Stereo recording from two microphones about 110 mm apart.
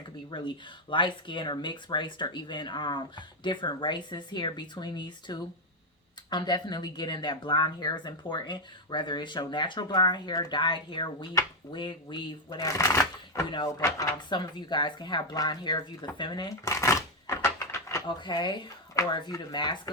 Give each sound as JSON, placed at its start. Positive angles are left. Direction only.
{"t": 0.3, "sound": "speech", "side_deg": 45}
{"t": 16.6, "sound": "a sound", "side_deg": 25}
{"t": 18.2, "sound": "speech", "side_deg": 45}